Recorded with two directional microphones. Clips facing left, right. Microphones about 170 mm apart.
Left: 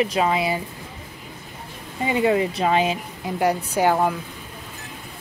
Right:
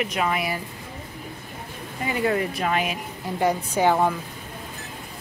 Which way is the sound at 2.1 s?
20° left (ahead or behind).